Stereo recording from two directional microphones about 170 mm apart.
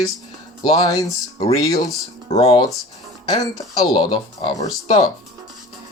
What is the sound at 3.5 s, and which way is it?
Speech, 25° left (ahead or behind).